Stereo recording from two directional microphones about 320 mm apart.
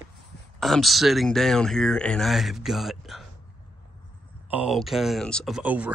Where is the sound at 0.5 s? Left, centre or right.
Centre.